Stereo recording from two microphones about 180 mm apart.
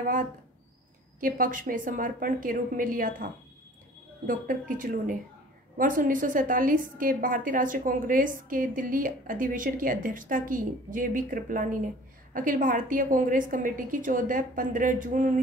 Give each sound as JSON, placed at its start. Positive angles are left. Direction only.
{"t": 1.2, "sound": "a woman's voice", "side_deg": -50}
{"t": 4.3, "sound": "a woman's voice", "side_deg": -50}